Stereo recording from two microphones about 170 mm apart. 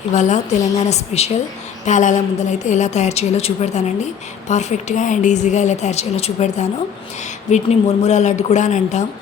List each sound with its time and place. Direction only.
0.1 s a woman's voice: 45° left (ahead or behind)